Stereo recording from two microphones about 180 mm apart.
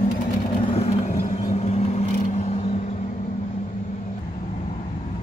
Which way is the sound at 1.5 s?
35° left (ahead or behind).